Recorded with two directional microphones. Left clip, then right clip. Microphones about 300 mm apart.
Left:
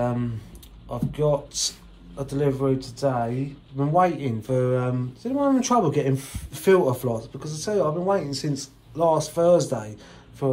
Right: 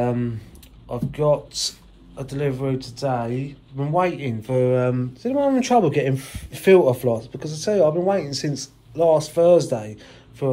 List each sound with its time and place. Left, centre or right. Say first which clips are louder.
0.0 s speech: right 3 dB; centre